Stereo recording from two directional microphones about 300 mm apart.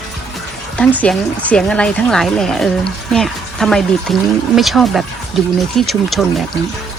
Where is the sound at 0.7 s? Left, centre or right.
Centre.